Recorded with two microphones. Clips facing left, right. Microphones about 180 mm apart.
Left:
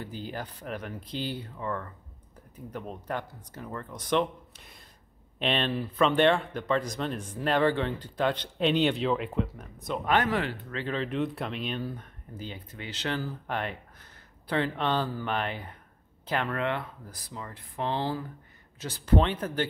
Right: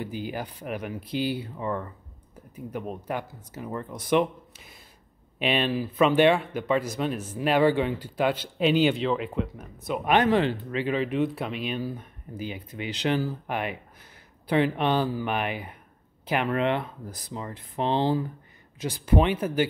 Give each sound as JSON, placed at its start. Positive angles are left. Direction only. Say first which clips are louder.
{"t": 0.0, "sound": "speech", "louder": "right 4 dB", "side_deg": -10}
{"t": 10.0, "sound": "speech", "louder": "right 5 dB", "side_deg": -20}